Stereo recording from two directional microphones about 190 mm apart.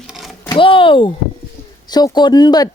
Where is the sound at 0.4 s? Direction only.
25° left (ahead or behind).